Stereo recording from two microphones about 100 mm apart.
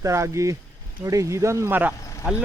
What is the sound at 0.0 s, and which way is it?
Speech, 30° right (ahead or behind).